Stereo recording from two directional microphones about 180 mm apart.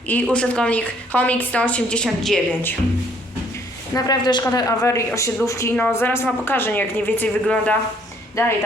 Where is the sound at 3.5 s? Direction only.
20° left (ahead or behind).